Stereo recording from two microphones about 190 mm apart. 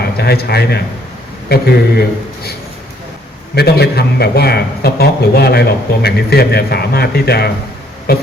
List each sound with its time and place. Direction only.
0.2 s a man's voice: 55° left (ahead or behind)